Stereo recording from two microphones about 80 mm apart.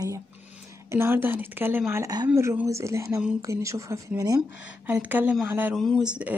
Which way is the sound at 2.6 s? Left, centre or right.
Right.